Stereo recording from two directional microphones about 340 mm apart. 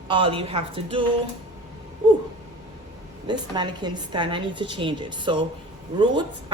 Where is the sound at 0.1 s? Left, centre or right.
Centre.